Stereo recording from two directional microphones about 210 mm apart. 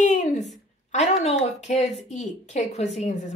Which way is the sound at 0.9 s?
30° left (ahead or behind).